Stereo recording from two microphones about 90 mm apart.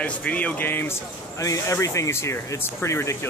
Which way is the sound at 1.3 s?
40° left (ahead or behind).